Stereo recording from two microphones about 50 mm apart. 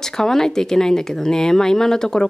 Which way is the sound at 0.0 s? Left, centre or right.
Centre.